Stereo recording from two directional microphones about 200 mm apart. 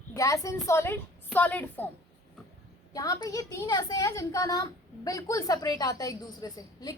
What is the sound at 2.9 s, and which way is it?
A woman's voice, 15° left (ahead or behind).